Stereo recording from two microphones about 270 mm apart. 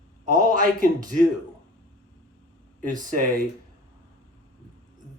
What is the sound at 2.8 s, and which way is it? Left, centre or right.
Speech, right.